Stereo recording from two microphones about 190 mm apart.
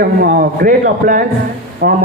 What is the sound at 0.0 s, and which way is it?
A man's voice, 45° right (ahead or behind).